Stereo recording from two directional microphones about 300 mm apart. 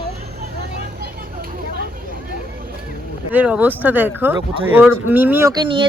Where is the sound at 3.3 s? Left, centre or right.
Centre.